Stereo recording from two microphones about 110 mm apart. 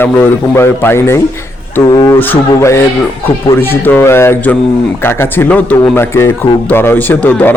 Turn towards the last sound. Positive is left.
turn(degrees=15)  # may be behind; listen again after turning